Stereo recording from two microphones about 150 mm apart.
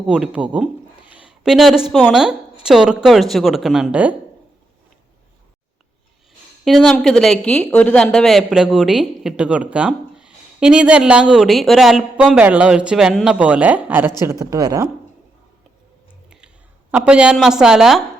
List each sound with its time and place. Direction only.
0.0 s speech: 5° right (ahead or behind)
1.1 s a sound: 5° right (ahead or behind)
1.9 s speech: 5° right (ahead or behind)
6.7 s speech: centre (ahead or behind); by 14.8 s 25° right (ahead or behind)
16.9 s speech: 5° right (ahead or behind)